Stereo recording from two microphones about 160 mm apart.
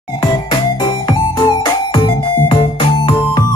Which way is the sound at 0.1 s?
25° left (ahead or behind).